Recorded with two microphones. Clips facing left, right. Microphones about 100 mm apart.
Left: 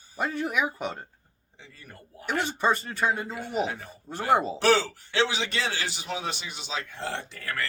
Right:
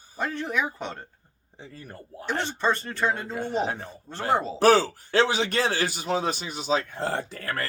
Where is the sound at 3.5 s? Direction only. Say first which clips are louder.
Right 1 dB; 30° right (ahead or behind).